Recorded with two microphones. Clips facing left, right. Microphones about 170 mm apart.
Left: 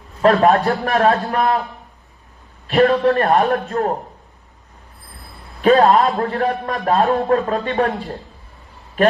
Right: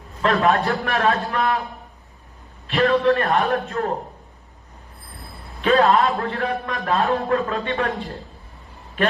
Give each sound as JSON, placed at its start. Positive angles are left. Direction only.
{"t": 0.4, "sound": "a man's voice", "side_deg": 40}
{"t": 2.6, "sound": "a man's voice", "side_deg": 40}
{"t": 5.6, "sound": "a man's voice", "side_deg": 40}